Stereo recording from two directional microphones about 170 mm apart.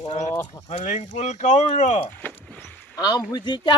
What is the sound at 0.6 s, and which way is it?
Speech, 45° left (ahead or behind).